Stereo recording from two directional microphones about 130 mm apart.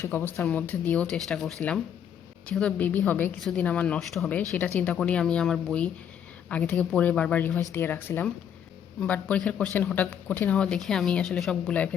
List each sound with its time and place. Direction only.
0.0 s speech: 15° left (ahead or behind)